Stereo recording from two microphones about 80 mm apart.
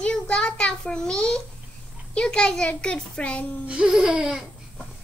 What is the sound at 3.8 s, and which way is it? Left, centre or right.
Laughter, centre.